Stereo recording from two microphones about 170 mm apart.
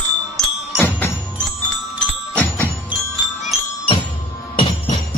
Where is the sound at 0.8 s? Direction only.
15° left (ahead or behind).